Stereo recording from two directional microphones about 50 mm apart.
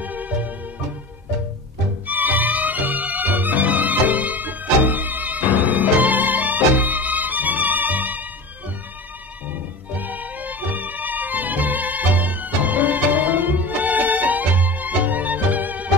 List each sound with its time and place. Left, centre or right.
0.0 s music: right
2.0 s music: right
9.5 s music: right